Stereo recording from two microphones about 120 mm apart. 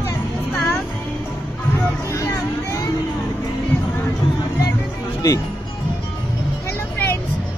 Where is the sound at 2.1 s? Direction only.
25° left (ahead or behind).